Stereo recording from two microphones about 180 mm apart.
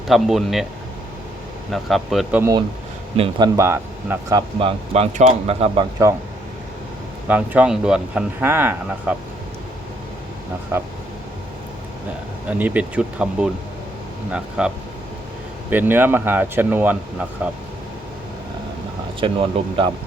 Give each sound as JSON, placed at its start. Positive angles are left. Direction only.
{"t": 0.1, "sound": "speech", "side_deg": 0}
{"t": 1.7, "sound": "speech", "side_deg": 0}
{"t": 2.4, "sound": "speech", "side_deg": -20}
{"t": 4.6, "sound": "speech", "side_deg": -35}
{"t": 6.0, "sound": "speech", "side_deg": -15}
{"t": 7.3, "sound": "speech", "side_deg": -10}
{"t": 10.7, "sound": "speech", "side_deg": -15}
{"t": 12.5, "sound": "speech", "side_deg": -10}
{"t": 15.7, "sound": "speech", "side_deg": -10}
{"t": 19.2, "sound": "speech", "side_deg": -30}